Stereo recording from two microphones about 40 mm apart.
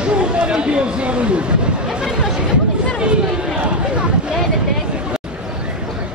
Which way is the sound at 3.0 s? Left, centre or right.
Right.